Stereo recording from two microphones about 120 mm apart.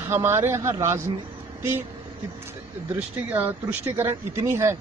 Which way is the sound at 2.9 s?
15° right (ahead or behind).